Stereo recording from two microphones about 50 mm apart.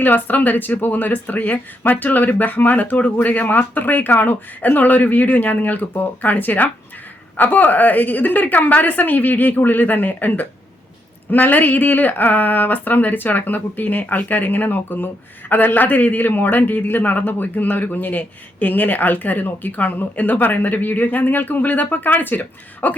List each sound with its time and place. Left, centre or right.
0.0 s a woman's voice: left